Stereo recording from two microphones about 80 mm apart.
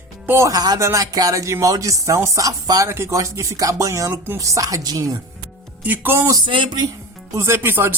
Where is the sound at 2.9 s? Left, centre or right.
Right.